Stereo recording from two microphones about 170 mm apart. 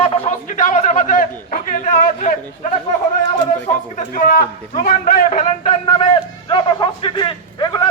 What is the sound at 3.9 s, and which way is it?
A man's voice, 50° left (ahead or behind).